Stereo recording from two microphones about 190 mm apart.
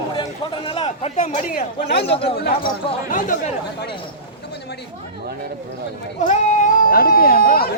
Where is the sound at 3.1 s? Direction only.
45° left (ahead or behind).